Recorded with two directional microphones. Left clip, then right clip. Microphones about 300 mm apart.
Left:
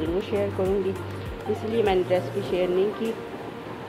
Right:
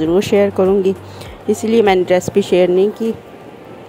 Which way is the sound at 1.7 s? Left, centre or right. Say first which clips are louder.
Right 11 dB; right.